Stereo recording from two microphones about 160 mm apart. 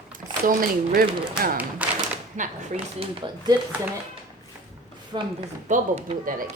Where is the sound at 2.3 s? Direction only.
50° right (ahead or behind).